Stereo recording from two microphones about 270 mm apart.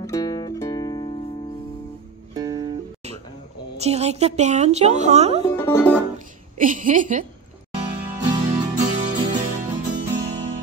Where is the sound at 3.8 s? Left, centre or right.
Right.